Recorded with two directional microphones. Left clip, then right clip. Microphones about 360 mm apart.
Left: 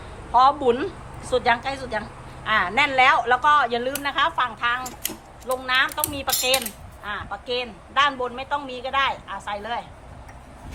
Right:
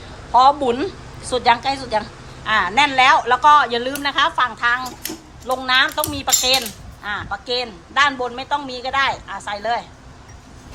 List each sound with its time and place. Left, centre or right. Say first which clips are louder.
0.3 s a woman's voice: right 4 dB; centre